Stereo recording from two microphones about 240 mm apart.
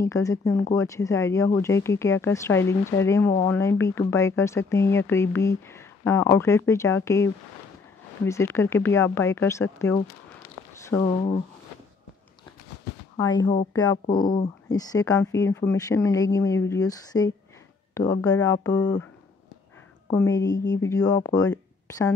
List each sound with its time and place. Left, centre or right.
0.0 s speech: centre
8.3 s speech: centre
13.1 s speech: centre
20.1 s speech: centre